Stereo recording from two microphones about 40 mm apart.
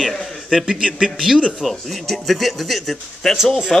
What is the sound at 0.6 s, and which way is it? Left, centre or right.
Speech, right.